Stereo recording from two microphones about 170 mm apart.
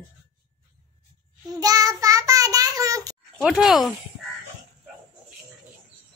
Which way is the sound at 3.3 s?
Centre (ahead or behind).